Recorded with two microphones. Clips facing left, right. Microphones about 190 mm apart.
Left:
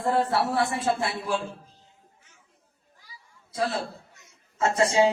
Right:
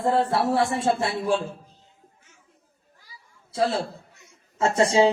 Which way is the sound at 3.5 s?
25° right (ahead or behind).